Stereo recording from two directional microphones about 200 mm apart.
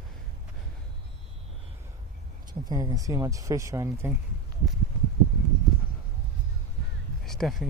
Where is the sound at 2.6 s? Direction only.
20° right (ahead or behind).